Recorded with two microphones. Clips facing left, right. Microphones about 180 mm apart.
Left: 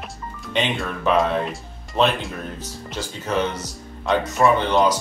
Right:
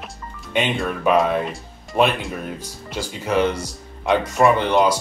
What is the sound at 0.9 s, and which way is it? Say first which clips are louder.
Speech: right 2 dB; 10° right (ahead or behind).